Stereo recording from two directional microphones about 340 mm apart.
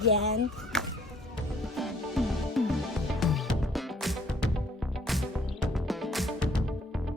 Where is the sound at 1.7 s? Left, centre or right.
Centre.